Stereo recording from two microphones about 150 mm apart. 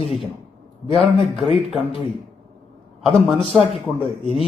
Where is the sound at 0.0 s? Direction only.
40° left (ahead or behind).